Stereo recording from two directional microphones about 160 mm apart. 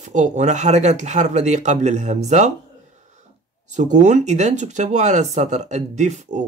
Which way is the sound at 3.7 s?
50° right (ahead or behind).